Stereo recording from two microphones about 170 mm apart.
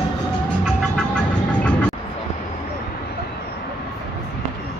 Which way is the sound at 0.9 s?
5° left (ahead or behind).